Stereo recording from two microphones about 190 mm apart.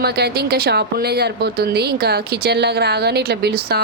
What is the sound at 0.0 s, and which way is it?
A woman's voice, 55° right (ahead or behind).